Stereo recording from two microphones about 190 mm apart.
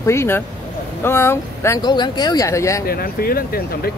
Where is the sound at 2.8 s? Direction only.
50° left (ahead or behind).